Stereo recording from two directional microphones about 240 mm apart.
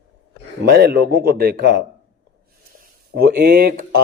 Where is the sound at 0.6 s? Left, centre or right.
Right.